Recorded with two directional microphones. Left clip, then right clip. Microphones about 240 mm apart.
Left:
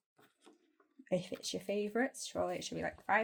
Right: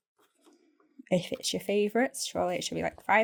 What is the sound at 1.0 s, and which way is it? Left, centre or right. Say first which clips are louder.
Speech: right 8 dB; right.